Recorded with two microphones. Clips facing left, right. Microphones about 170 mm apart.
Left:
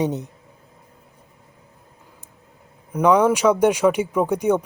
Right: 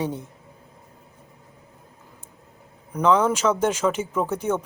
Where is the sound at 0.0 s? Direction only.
20° left (ahead or behind).